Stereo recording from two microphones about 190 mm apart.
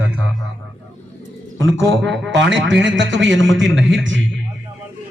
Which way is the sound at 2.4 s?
75° right (ahead or behind).